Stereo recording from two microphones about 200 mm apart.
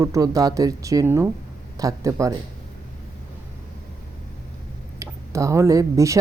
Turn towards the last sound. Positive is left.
turn(degrees=-15)  # may be behind; listen again after turning